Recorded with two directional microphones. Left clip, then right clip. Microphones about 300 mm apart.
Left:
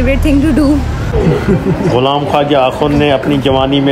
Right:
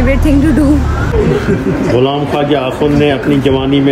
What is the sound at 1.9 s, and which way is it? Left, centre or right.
Speech, centre.